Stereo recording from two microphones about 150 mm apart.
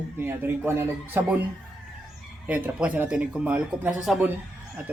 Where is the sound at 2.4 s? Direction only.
10° right (ahead or behind).